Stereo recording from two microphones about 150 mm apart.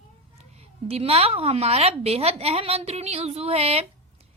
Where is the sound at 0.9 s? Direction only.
40° right (ahead or behind).